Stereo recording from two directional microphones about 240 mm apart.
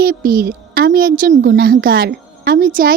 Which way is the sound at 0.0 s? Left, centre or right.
Right.